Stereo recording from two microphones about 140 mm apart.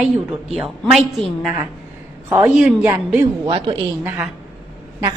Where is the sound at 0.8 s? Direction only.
Centre (ahead or behind).